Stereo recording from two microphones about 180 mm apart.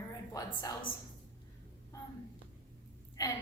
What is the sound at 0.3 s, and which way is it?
Speech, 20° left (ahead or behind).